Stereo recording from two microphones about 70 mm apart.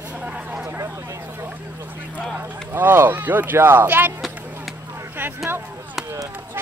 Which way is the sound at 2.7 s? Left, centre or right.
Right.